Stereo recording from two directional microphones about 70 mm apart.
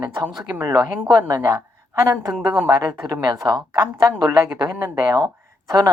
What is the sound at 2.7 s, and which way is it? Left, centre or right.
A woman's voice, right.